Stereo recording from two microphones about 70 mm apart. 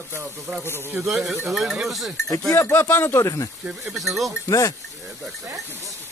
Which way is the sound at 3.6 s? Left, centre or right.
Centre.